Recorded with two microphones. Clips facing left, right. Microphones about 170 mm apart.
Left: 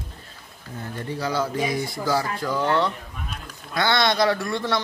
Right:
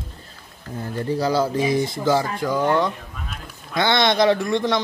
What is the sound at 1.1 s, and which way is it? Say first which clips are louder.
Speech: right 5 dB; 35° right (ahead or behind).